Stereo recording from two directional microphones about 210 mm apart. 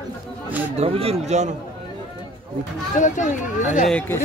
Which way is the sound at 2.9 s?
35° left (ahead or behind).